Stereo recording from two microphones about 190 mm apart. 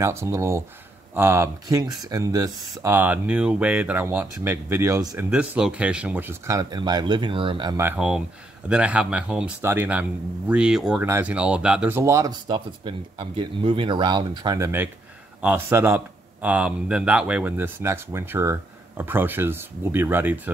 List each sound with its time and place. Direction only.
0.0 s speech: 15° right (ahead or behind)
7.8 s speech: 10° right (ahead or behind)